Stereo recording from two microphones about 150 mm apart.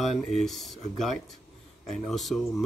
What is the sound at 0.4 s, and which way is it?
A man's voice, centre (ahead or behind).